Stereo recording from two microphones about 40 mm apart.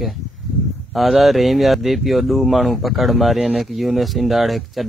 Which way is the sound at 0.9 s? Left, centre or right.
Centre.